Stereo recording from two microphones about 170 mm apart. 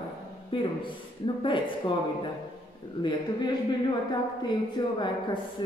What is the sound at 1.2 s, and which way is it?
Speech, 30° left (ahead or behind).